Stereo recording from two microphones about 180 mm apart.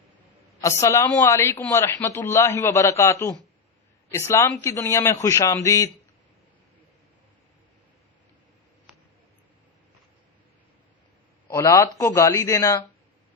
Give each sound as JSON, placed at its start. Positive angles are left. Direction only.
{"t": 0.6, "sound": "a man's voice", "side_deg": 15}
{"t": 11.4, "sound": "a man's voice", "side_deg": 15}